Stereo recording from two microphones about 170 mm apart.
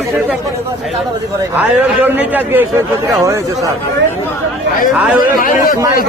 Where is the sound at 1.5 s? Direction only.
10° right (ahead or behind).